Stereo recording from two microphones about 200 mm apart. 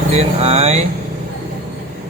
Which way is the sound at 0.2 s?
30° right (ahead or behind).